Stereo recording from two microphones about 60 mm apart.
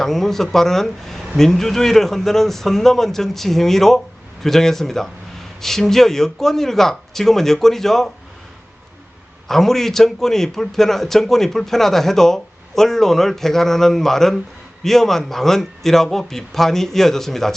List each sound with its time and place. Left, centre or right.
0.0 s a man's voice: centre
9.5 s a man's voice: centre